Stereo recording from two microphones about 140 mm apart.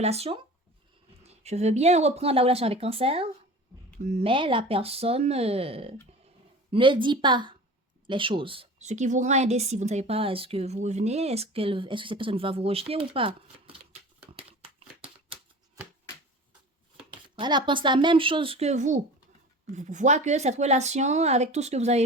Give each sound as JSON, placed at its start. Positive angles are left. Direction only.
{"t": 0.0, "sound": "speech", "side_deg": -50}
{"t": 8.8, "sound": "speech", "side_deg": -55}
{"t": 17.1, "sound": "speech", "side_deg": -35}